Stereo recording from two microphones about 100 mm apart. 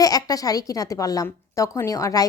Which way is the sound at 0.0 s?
35° left (ahead or behind).